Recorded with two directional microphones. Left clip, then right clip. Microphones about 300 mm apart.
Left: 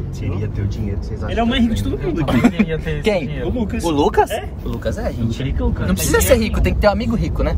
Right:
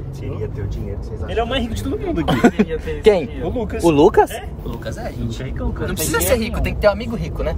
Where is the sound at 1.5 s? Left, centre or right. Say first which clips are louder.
Left 3 dB; centre.